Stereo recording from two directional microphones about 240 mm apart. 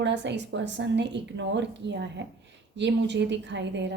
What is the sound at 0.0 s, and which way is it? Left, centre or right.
A woman's voice, right.